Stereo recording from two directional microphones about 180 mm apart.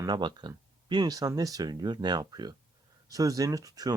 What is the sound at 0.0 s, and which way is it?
Speech, 25° right (ahead or behind).